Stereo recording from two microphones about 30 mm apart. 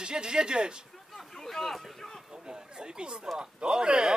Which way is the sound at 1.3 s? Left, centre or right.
Centre.